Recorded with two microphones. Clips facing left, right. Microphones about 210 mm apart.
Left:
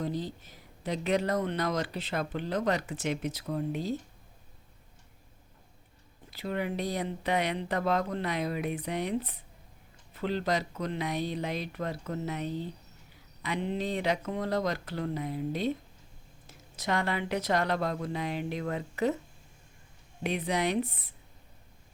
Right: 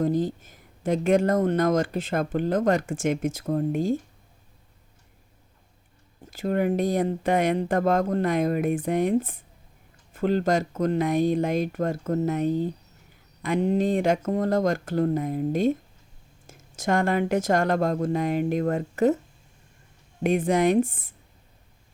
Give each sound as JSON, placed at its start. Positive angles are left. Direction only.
{"t": 0.0, "sound": "speech", "side_deg": -50}
{"t": 6.3, "sound": "speech", "side_deg": -45}
{"t": 20.2, "sound": "speech", "side_deg": -50}